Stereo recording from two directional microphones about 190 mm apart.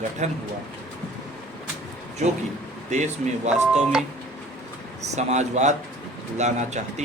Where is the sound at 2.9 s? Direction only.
40° right (ahead or behind).